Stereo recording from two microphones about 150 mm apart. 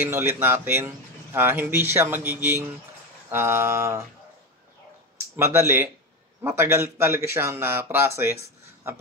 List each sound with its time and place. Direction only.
0.0 s speech: 15° right (ahead or behind)
5.3 s speech: 15° right (ahead or behind)